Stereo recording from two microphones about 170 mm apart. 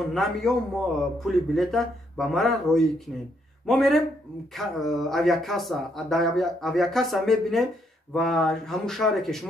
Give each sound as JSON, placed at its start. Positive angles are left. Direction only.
{"t": 0.1, "sound": "speech", "side_deg": 0}